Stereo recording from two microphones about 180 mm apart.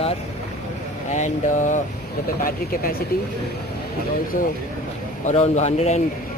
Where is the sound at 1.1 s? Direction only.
40° left (ahead or behind).